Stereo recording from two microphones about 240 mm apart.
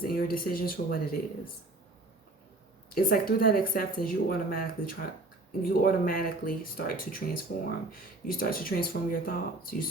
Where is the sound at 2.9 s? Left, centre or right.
Left.